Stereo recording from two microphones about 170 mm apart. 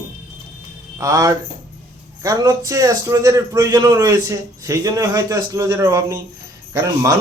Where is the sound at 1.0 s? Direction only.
20° right (ahead or behind).